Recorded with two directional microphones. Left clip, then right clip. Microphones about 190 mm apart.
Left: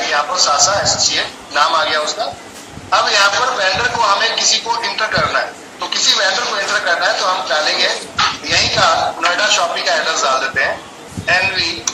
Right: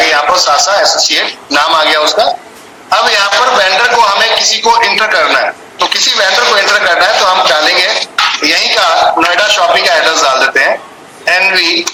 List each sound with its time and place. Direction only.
0.0 s a man's voice: 55° right (ahead or behind)